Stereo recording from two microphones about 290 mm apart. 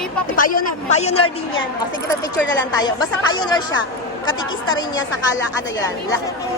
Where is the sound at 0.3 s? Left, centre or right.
Left.